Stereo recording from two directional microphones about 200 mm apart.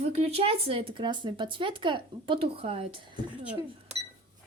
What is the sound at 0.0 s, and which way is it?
Speech, 30° right (ahead or behind).